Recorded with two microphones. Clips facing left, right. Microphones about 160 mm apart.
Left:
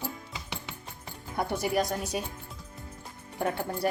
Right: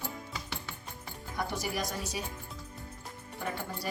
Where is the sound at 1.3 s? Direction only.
55° left (ahead or behind).